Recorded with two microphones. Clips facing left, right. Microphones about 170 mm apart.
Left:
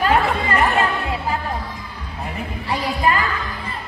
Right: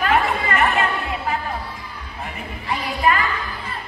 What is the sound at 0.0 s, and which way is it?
Chatter, 35° left (ahead or behind).